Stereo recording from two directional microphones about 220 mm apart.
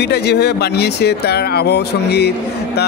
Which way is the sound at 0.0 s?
50° left (ahead or behind).